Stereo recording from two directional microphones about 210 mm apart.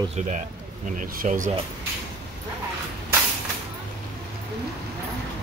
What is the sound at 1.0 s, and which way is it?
Speech, 40° right (ahead or behind).